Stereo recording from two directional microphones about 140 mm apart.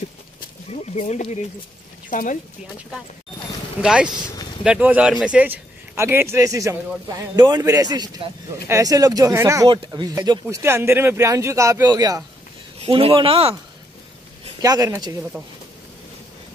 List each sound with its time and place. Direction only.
0.7 s speech: 55° left (ahead or behind)
2.0 s speech: 70° left (ahead or behind)
3.8 s a man's voice: 5° right (ahead or behind)
9.7 s speech: 35° right (ahead or behind)
10.5 s a man's voice: 15° right (ahead or behind)
12.8 s speech: 40° right (ahead or behind)
14.6 s a man's voice: 25° right (ahead or behind)